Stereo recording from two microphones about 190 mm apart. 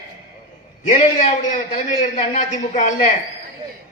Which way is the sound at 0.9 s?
40° left (ahead or behind).